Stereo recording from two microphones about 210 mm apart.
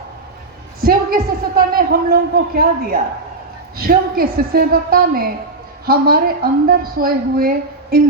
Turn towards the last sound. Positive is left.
turn(degrees=-45)  # may be behind; listen again after turning